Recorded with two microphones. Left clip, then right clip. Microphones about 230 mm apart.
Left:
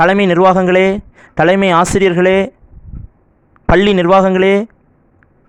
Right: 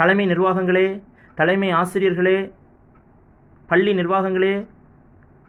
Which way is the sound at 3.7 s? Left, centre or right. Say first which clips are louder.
Left 9 dB; left.